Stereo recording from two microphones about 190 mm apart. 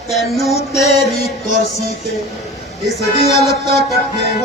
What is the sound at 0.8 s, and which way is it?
Music, 35° left (ahead or behind).